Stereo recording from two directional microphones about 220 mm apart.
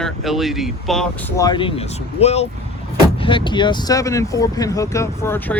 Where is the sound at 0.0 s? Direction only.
Centre (ahead or behind).